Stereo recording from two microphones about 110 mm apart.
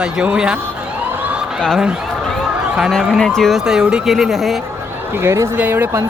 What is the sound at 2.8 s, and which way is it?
Speech, centre (ahead or behind).